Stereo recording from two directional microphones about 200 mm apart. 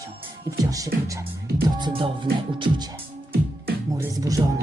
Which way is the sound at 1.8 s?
25° right (ahead or behind).